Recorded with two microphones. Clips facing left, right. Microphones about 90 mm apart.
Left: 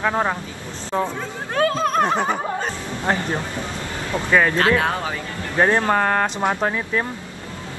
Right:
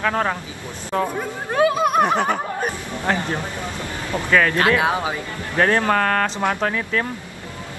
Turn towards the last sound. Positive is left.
turn(degrees=20)  # may be behind; listen again after turning